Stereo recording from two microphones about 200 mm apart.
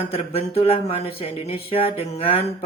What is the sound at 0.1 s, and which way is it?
Speech, 30° left (ahead or behind).